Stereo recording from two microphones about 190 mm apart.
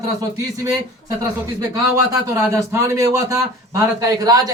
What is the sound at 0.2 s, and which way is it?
A man's voice, 15° right (ahead or behind).